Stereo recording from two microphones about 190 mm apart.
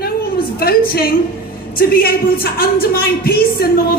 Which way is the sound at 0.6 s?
55° left (ahead or behind).